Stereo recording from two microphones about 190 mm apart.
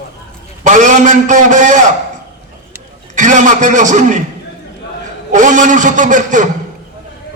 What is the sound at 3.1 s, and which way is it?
A man's voice, 40° right (ahead or behind).